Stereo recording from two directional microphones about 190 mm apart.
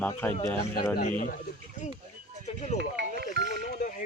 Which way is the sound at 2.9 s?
60° right (ahead or behind).